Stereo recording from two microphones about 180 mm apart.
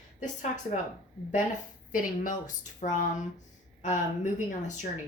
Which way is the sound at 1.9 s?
50° left (ahead or behind).